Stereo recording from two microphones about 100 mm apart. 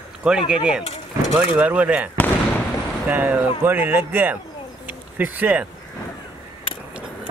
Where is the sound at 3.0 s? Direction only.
20° right (ahead or behind).